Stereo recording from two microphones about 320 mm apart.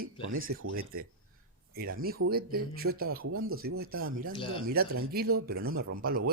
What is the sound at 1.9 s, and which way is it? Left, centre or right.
Speech, right.